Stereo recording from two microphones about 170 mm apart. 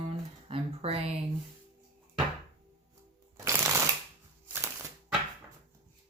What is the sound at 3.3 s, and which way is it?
Shuffling cards, 15° right (ahead or behind).